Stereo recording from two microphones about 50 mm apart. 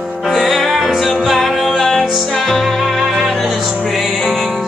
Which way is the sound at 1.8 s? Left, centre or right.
Centre.